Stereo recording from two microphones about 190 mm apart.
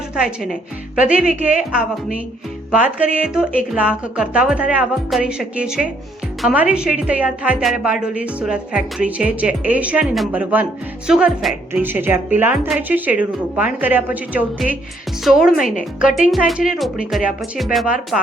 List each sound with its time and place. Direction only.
0.2 s a woman's voice: 5° right (ahead or behind)
3.2 s a woman's voice: 5° right (ahead or behind)
15.5 s speech: 45° left (ahead or behind)
15.8 s a woman's voice: centre (ahead or behind)